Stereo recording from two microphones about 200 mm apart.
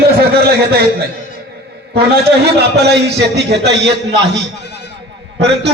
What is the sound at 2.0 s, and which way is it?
A man's voice, 55° right (ahead or behind).